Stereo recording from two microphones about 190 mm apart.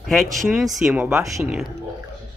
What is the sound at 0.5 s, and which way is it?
Speech, centre (ahead or behind).